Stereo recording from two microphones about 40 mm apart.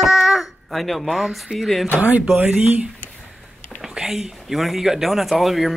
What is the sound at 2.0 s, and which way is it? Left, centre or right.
Speech, right.